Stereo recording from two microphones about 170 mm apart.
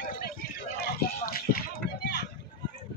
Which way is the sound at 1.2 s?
60° left (ahead or behind).